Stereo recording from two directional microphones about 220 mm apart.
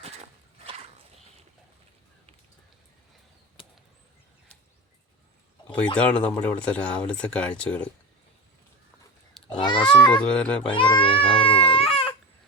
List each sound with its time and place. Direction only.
0.0 s horse: 25° right (ahead or behind)
3.6 s arrow: 25° left (ahead or behind)
5.7 s speech: 5° left (ahead or behind)
9.6 s a sound: 20° left (ahead or behind)
9.9 s speech: 20° left (ahead or behind)
10.2 s speech: 5° left (ahead or behind)
10.7 s speech: 20° left (ahead or behind)
11.5 s baby cry: 25° left (ahead or behind)